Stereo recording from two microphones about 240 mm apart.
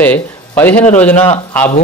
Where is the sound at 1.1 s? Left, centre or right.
Left.